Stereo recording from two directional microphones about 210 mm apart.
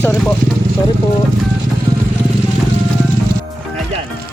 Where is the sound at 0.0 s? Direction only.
10° left (ahead or behind).